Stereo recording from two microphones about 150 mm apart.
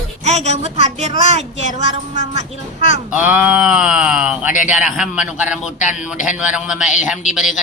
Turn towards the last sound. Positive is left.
turn(degrees=0)  # may be behind; listen again after turning